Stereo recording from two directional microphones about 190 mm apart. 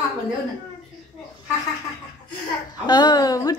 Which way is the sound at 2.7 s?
20° left (ahead or behind).